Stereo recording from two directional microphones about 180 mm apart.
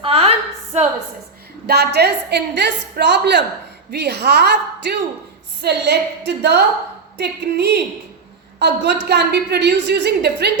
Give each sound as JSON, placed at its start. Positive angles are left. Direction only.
{"t": 0.0, "sound": "a sound", "side_deg": -35}
{"t": 1.6, "sound": "a woman's voice", "side_deg": -65}
{"t": 5.6, "sound": "a woman's voice", "side_deg": -65}